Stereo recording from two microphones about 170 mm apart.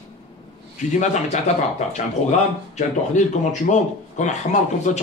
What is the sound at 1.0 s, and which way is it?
Speech, 45° left (ahead or behind).